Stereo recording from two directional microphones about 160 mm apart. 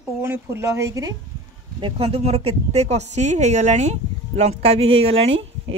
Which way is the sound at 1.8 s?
40° right (ahead or behind).